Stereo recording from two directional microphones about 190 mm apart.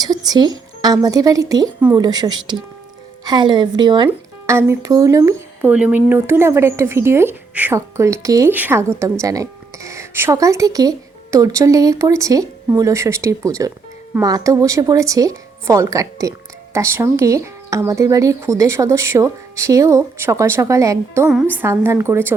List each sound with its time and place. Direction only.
0.0 s speech: 20° right (ahead or behind)